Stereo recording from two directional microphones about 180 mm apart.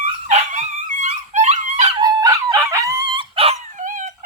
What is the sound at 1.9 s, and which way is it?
Dog, 20° right (ahead or behind).